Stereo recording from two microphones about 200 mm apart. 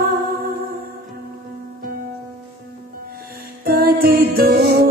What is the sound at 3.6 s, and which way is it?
Music, 50° right (ahead or behind).